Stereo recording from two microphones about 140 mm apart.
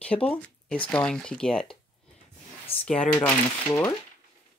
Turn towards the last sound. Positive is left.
turn(degrees=20)  # may be behind; listen again after turning